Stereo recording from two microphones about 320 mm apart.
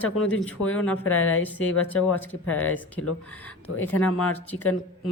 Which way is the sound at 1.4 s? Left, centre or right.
Centre.